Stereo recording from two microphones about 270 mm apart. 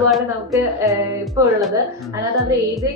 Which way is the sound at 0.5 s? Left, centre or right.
Centre.